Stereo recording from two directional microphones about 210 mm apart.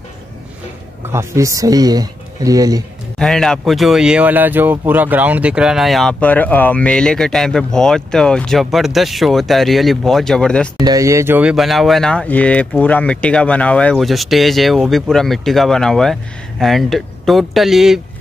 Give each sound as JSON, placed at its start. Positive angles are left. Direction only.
{"t": 1.1, "sound": "speech", "side_deg": -15}
{"t": 3.2, "sound": "speech", "side_deg": 5}
{"t": 10.8, "sound": "speech", "side_deg": -15}